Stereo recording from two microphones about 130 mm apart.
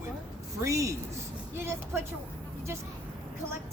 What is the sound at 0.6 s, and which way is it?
Speech, 25° right (ahead or behind).